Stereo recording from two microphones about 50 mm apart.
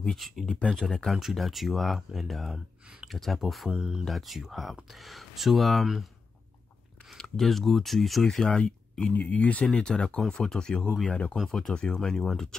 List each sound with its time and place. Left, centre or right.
0.1 s speech: centre
0.5 s speech: centre
1.1 s speech: centre
3.7 s speech: centre
4.0 s speech: centre
7.3 s speech: centre
8.5 s speech: centre
9.1 s speech: left
9.8 s speech: centre
11.1 s speech: left
11.4 s speech: centre